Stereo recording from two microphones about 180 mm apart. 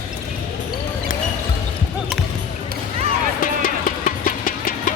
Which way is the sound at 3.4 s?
50° left (ahead or behind).